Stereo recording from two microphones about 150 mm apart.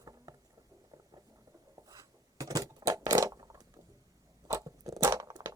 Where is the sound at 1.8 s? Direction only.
25° right (ahead or behind).